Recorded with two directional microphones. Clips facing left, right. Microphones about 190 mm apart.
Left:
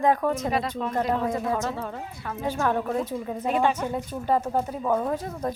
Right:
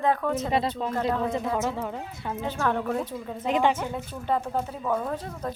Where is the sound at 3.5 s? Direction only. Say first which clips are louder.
Even; 15° right (ahead or behind).